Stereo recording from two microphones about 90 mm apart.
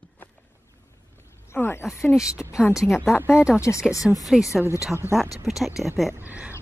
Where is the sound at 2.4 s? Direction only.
15° left (ahead or behind).